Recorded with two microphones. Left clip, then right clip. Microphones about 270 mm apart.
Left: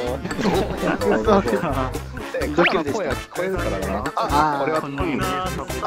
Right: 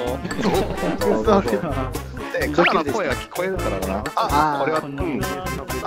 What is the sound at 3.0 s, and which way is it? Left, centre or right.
Speech, centre.